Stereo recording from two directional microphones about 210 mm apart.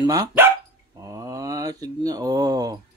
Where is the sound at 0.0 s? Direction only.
15° right (ahead or behind).